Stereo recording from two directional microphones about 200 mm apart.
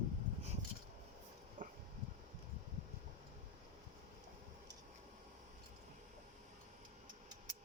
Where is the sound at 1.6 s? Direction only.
40° right (ahead or behind).